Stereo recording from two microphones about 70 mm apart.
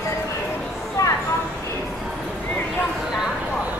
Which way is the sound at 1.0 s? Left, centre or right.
Left.